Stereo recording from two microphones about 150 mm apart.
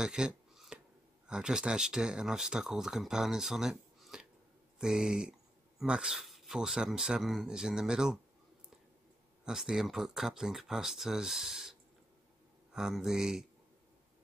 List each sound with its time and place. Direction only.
0.0 s a sound: 5° right (ahead or behind)
1.2 s speech: 5° right (ahead or behind)
9.4 s speech: 5° right (ahead or behind)
12.7 s speech: 5° right (ahead or behind)